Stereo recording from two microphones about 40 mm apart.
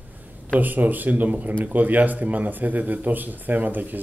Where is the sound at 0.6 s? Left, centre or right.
Right.